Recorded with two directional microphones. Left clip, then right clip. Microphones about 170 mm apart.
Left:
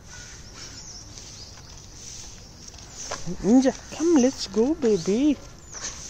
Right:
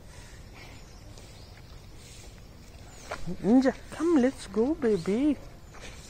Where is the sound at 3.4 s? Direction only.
15° left (ahead or behind).